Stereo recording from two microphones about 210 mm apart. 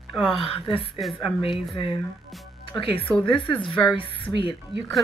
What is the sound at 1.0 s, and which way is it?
Speech, centre (ahead or behind).